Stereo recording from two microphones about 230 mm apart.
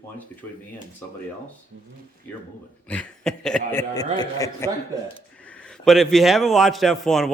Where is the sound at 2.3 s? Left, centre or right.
Centre.